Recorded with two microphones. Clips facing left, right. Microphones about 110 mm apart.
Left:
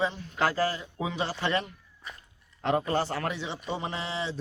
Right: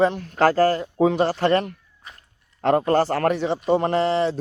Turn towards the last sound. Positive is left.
turn(degrees=-55)  # may be behind; listen again after turning